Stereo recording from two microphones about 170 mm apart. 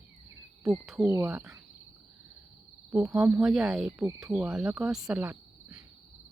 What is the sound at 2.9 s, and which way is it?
Speech, centre (ahead or behind).